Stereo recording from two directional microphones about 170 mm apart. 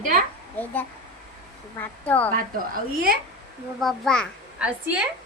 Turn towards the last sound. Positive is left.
turn(degrees=-5)  # may be behind; listen again after turning